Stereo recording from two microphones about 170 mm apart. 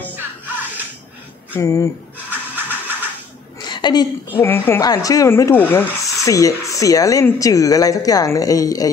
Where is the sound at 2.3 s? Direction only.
10° right (ahead or behind).